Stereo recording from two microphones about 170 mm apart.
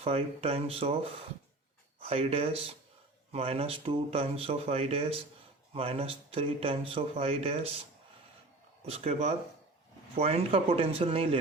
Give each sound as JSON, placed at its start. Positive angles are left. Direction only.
{"t": 0.0, "sound": "speech", "side_deg": -35}
{"t": 2.0, "sound": "speech", "side_deg": -35}
{"t": 8.9, "sound": "speech", "side_deg": -40}